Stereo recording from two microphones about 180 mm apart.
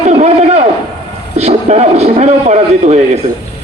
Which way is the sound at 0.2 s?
40° right (ahead or behind).